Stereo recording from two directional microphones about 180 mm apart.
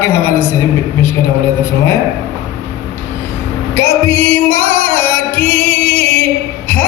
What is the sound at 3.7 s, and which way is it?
Music, 10° left (ahead or behind).